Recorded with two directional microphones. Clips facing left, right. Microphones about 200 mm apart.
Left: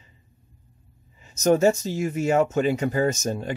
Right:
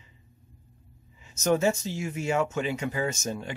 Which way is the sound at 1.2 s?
40° left (ahead or behind).